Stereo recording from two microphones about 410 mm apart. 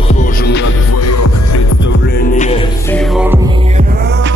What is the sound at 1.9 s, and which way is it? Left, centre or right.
Music, centre.